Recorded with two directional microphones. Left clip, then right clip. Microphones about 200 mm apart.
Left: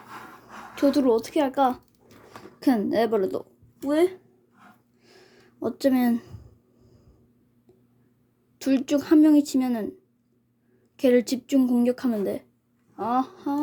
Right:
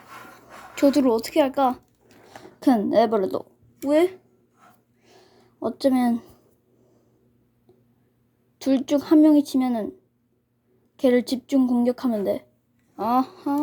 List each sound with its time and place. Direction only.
0.8 s a woman's voice: 10° right (ahead or behind)
5.0 s a sound: centre (ahead or behind)
8.5 s speech: centre (ahead or behind)
10.9 s speech: centre (ahead or behind)